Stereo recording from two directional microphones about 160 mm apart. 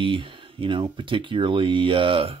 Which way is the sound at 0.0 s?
35° right (ahead or behind).